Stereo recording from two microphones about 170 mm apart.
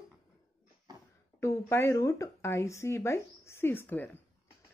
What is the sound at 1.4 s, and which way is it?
A woman's voice, 15° left (ahead or behind).